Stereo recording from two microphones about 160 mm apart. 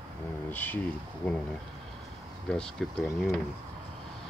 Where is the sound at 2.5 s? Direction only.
5° left (ahead or behind).